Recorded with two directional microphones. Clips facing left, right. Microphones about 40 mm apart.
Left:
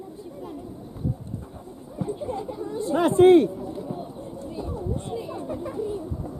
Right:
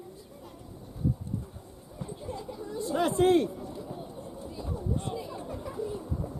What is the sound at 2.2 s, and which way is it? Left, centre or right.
Speech, left.